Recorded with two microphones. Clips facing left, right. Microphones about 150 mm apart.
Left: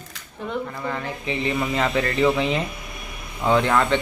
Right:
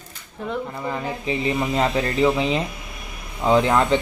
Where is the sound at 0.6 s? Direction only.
20° right (ahead or behind).